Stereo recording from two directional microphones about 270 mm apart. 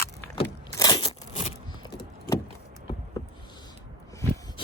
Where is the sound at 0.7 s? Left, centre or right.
Centre.